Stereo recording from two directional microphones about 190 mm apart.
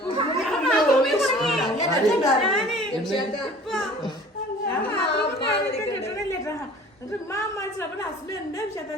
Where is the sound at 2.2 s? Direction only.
Centre (ahead or behind).